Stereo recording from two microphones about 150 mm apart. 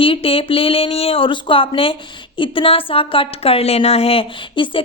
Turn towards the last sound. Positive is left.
turn(degrees=35)  # may be behind; listen again after turning